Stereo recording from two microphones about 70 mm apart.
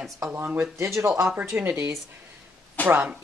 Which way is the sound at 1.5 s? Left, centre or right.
Right.